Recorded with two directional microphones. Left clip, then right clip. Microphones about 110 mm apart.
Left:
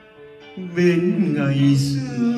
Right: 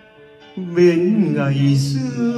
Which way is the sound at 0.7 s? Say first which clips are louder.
Right 4 dB; 20° right (ahead or behind).